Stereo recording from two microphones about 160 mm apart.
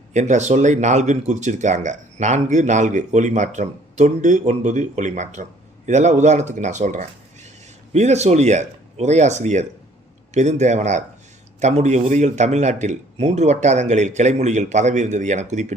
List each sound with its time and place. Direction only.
0.1 s speech: 45° right (ahead or behind)